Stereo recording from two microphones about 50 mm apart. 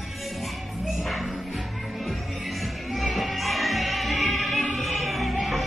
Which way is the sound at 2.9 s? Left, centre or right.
Centre.